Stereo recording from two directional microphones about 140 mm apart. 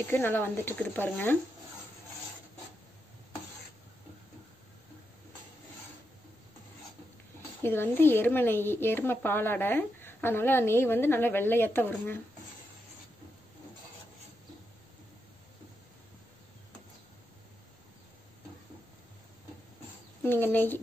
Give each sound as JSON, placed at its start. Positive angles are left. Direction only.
{"t": 0.0, "sound": "speech", "side_deg": 15}
{"t": 7.6, "sound": "speech", "side_deg": 15}
{"t": 20.2, "sound": "speech", "side_deg": 15}